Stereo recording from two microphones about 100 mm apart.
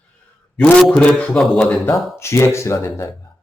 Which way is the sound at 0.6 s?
5° left (ahead or behind).